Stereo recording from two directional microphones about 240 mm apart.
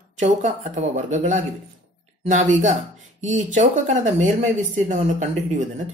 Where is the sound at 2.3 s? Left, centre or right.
Right.